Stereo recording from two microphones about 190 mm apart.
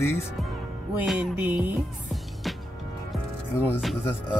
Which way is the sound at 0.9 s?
5° right (ahead or behind).